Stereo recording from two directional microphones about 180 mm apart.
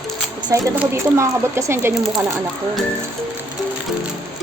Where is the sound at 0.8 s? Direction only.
15° right (ahead or behind).